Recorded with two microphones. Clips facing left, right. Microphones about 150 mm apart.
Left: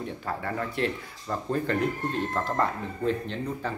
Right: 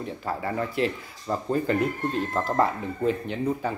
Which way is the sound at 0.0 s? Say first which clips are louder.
Right 2 dB; centre (ahead or behind).